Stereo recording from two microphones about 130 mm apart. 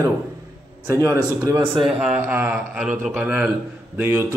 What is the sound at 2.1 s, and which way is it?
A man's voice, 15° right (ahead or behind).